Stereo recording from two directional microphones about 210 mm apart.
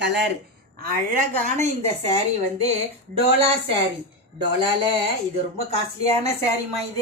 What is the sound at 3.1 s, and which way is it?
Speech, 25° right (ahead or behind).